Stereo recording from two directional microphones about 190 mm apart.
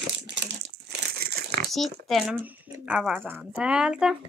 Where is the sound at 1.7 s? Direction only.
Centre (ahead or behind).